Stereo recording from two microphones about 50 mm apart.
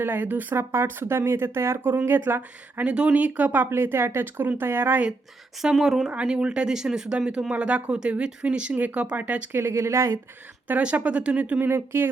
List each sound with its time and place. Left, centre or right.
0.0 s speech: right
0.5 s speech: right
2.0 s speech: right
2.8 s speech: right
3.7 s speech: right
5.7 s speech: centre
6.2 s speech: centre
7.5 s speech: right
9.5 s speech: right
10.7 s speech: right
11.7 s speech: right